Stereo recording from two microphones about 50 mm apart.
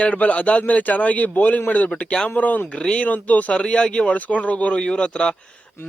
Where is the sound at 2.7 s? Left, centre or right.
Centre.